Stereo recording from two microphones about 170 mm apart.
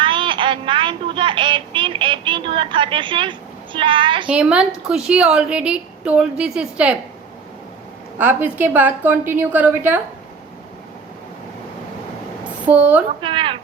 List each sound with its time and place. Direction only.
0.0 s child singing: 30° right (ahead or behind)
4.3 s a woman's voice: 5° right (ahead or behind)
8.2 s a woman's voice: 10° right (ahead or behind)
12.6 s a woman's voice: 10° right (ahead or behind)
13.2 s a sound: 30° right (ahead or behind)